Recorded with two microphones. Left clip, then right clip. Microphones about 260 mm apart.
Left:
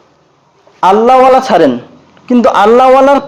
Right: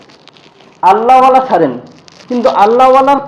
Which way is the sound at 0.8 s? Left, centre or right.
Left.